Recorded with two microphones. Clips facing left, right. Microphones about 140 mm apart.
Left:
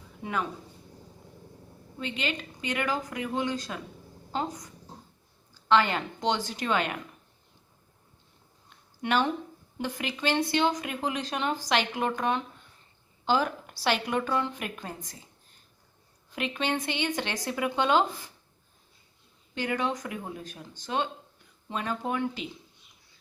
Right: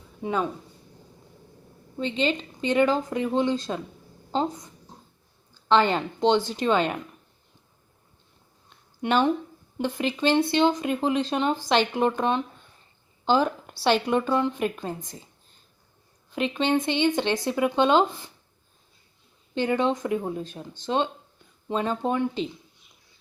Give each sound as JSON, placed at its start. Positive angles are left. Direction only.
{"t": 0.2, "sound": "speech", "side_deg": -25}
{"t": 2.0, "sound": "speech", "side_deg": -25}
{"t": 5.6, "sound": "speech", "side_deg": -30}
{"t": 9.0, "sound": "speech", "side_deg": -20}
{"t": 16.3, "sound": "speech", "side_deg": -25}
{"t": 19.5, "sound": "speech", "side_deg": -25}